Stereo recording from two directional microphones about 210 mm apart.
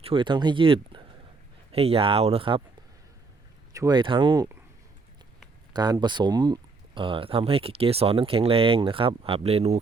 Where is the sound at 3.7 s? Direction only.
15° right (ahead or behind).